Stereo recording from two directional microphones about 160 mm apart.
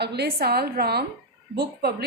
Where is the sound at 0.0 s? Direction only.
90° right.